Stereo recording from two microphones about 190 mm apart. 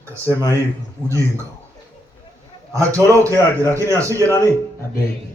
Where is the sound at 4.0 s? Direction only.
15° right (ahead or behind).